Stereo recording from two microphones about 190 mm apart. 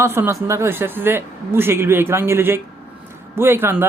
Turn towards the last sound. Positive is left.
turn(degrees=-10)  # may be behind; listen again after turning